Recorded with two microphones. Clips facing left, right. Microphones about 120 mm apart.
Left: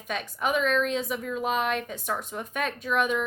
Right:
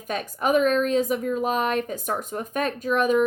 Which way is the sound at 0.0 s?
45° right (ahead or behind).